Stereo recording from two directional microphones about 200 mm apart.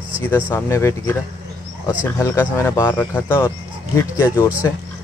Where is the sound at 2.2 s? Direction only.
15° left (ahead or behind).